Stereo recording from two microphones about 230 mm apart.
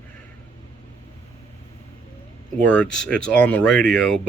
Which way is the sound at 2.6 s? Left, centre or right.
Centre.